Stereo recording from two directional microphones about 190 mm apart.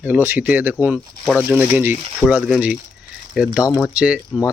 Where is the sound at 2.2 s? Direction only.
5° left (ahead or behind).